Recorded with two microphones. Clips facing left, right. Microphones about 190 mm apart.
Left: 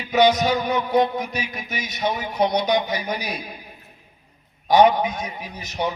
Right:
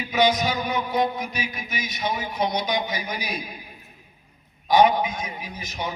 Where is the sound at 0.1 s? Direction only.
40° left (ahead or behind).